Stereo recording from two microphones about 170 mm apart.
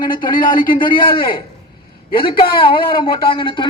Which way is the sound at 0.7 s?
30° left (ahead or behind).